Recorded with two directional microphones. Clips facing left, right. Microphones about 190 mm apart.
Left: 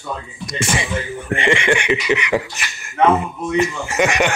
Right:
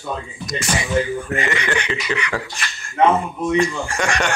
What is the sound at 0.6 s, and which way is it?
Speech, 25° left (ahead or behind).